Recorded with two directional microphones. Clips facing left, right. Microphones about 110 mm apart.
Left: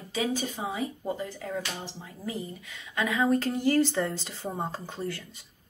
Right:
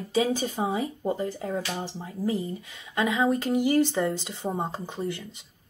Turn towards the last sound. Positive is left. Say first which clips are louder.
# right 3 dB
turn(degrees=-20)  # may be behind; listen again after turning